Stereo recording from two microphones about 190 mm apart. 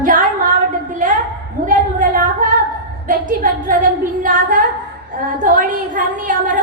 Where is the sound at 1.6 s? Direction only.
45° right (ahead or behind).